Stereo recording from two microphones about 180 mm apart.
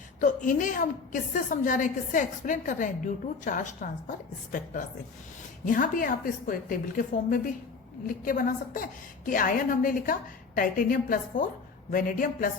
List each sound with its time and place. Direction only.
0.2 s a woman's voice: 45° left (ahead or behind)
5.6 s a woman's voice: 45° left (ahead or behind)